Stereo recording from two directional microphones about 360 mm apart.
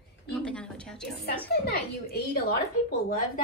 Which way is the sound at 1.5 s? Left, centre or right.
Left.